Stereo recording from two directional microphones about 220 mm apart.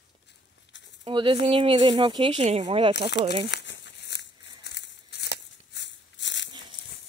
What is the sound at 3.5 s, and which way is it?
Crumpling, 55° left (ahead or behind).